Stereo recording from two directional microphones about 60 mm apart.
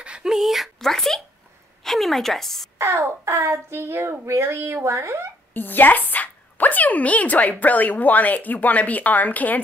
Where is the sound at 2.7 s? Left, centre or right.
Right.